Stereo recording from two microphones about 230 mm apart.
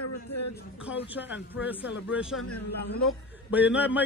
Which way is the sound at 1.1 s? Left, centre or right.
Centre.